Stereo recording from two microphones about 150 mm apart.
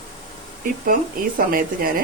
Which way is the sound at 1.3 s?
75° right (ahead or behind).